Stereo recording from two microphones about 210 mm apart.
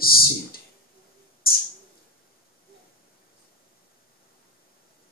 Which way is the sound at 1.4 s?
45° left (ahead or behind).